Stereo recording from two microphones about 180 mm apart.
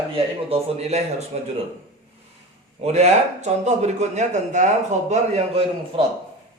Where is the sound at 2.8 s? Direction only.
40° right (ahead or behind).